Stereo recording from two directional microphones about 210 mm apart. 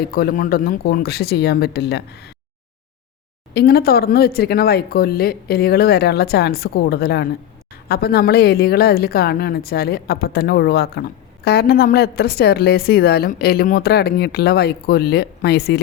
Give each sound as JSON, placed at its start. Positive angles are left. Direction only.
{"t": 0.0, "sound": "a woman's voice", "side_deg": 45}
{"t": 3.5, "sound": "a woman's voice", "side_deg": 50}